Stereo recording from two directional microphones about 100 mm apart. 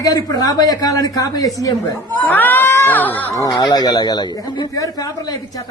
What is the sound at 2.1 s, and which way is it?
Speech, 20° left (ahead or behind).